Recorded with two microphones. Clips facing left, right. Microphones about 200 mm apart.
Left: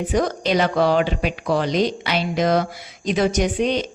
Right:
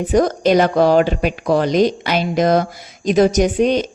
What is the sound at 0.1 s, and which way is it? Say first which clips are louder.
Speech: right 7 dB; 45° right (ahead or behind).